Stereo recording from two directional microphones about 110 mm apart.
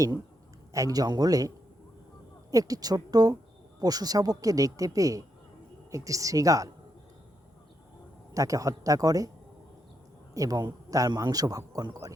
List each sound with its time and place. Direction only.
0.7 s a man's voice: 30° right (ahead or behind)
8.3 s a man's voice: 30° right (ahead or behind)
10.3 s a man's voice: 30° right (ahead or behind)